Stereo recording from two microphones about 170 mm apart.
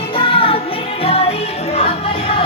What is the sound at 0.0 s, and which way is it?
Music, 30° left (ahead or behind).